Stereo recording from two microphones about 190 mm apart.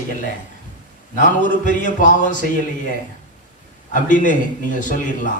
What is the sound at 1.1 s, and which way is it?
Speech, 45° left (ahead or behind).